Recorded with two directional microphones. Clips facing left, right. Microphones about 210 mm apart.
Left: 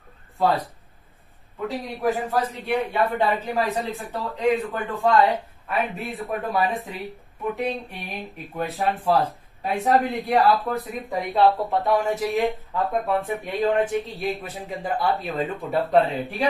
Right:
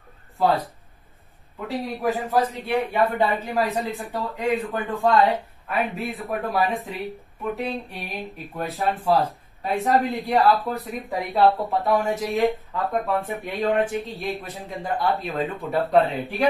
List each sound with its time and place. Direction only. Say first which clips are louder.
1.7 s speech: even; centre (ahead or behind)
3.8 s speech: right 1 dB; 15° right (ahead or behind)
4.1 s speech: left 3 dB; centre (ahead or behind)